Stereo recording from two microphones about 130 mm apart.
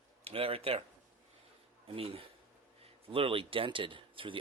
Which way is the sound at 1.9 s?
45° right (ahead or behind).